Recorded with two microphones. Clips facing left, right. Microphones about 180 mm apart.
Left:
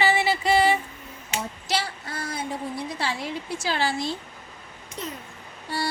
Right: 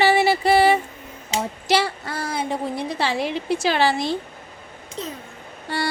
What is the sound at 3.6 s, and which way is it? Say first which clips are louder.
Speech: right 5 dB; 85° right.